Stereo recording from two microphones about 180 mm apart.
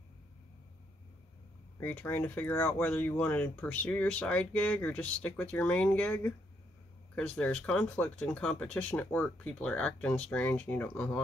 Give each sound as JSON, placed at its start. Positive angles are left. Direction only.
{"t": 1.8, "sound": "speech", "side_deg": 10}